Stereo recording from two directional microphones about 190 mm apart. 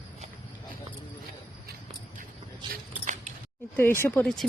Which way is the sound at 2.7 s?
40° right (ahead or behind).